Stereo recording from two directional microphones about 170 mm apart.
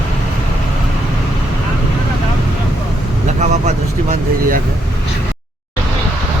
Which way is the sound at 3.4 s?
45° right (ahead or behind).